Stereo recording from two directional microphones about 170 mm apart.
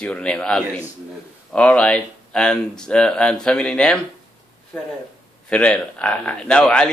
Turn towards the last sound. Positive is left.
turn(degrees=5)  # may be behind; listen again after turning